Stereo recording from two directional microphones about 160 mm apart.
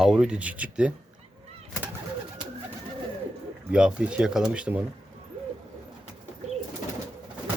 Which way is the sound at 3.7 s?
5° right (ahead or behind).